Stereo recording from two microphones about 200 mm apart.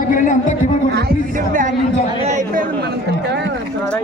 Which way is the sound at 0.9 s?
45° right (ahead or behind).